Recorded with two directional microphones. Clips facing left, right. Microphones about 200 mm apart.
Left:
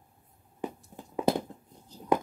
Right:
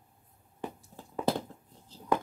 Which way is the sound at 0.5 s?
15° left (ahead or behind).